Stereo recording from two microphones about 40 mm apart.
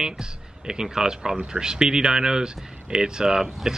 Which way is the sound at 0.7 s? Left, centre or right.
Centre.